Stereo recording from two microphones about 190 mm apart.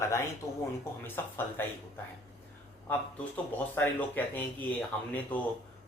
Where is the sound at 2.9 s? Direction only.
10° left (ahead or behind).